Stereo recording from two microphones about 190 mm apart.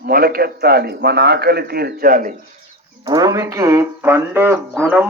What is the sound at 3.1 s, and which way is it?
Speech, 20° right (ahead or behind).